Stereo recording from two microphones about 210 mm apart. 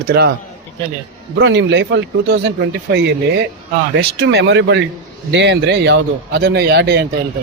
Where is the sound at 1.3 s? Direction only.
60° right (ahead or behind).